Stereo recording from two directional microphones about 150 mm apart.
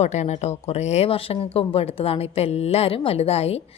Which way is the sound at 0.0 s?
50° left (ahead or behind).